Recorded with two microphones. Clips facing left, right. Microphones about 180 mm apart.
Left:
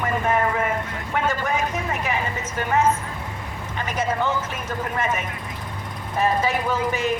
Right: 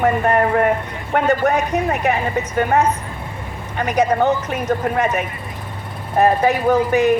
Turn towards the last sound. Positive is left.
turn(degrees=-60)  # may be behind; listen again after turning